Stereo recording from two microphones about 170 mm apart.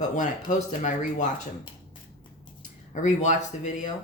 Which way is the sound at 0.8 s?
45° left (ahead or behind).